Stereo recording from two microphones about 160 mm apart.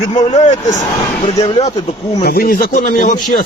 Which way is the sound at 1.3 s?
20° left (ahead or behind).